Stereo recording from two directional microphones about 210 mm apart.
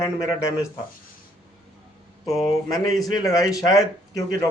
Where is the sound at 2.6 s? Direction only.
15° left (ahead or behind).